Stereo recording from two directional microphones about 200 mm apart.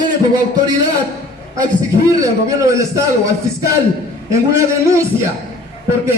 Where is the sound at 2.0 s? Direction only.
15° right (ahead or behind).